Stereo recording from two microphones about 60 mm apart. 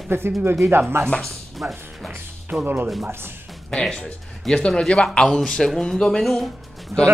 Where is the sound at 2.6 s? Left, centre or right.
Right.